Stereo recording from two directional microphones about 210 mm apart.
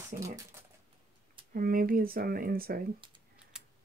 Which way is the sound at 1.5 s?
40° right (ahead or behind).